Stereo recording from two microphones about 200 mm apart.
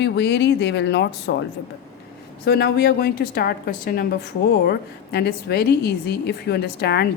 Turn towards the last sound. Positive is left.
turn(degrees=55)  # may be behind; listen again after turning